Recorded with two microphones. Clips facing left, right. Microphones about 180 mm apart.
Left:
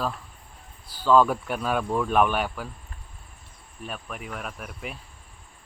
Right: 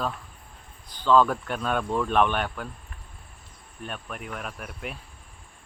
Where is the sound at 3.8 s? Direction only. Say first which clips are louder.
Even; centre (ahead or behind).